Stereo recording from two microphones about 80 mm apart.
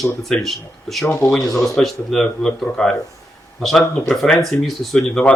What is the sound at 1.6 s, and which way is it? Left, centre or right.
Speech, centre.